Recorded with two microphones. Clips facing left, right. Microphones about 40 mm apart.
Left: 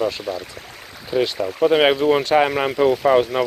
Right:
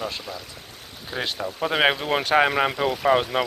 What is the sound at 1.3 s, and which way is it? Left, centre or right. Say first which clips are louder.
Speech: left 7 dB; centre.